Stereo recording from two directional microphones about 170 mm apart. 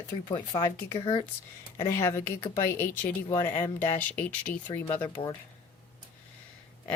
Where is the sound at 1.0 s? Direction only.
30° left (ahead or behind).